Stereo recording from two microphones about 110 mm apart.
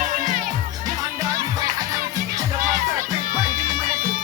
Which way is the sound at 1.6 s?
35° right (ahead or behind).